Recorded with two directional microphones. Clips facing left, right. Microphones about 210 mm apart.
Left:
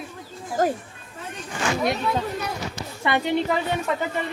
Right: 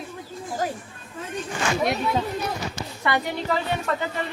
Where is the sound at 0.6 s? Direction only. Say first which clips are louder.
Left 6 dB; 45° left (ahead or behind).